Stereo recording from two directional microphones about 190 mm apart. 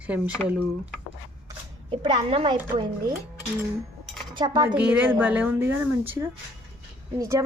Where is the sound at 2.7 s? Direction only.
25° right (ahead or behind).